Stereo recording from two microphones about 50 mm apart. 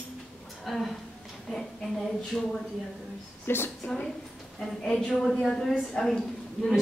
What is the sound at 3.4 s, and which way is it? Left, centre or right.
Speech, left.